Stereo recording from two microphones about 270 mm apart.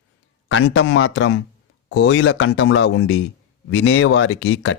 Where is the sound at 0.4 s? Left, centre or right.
Left.